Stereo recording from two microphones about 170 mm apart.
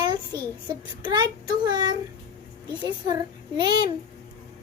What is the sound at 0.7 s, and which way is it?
A child's voice, 25° right (ahead or behind).